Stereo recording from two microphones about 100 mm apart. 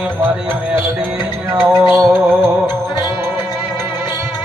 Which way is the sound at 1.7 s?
30° right (ahead or behind).